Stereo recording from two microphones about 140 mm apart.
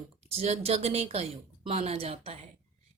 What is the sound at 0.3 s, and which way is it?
A woman's voice, 50° right (ahead or behind).